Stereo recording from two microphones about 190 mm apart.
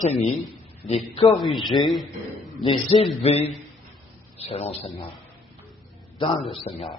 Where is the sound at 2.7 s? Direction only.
30° left (ahead or behind).